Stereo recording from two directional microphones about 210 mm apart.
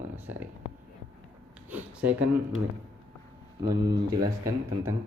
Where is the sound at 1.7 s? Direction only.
5° right (ahead or behind).